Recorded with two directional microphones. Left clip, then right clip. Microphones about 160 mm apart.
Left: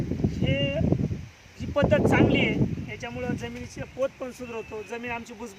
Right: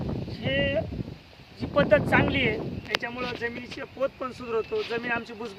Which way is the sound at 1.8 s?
15° left (ahead or behind).